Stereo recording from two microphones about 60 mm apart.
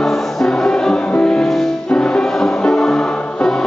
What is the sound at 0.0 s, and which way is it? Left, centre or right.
Music, centre.